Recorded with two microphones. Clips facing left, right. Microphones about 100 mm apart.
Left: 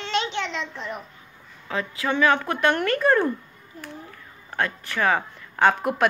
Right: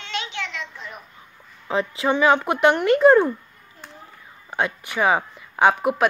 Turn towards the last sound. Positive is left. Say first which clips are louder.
# right 2 dB
turn(degrees=-5)  # may be behind; listen again after turning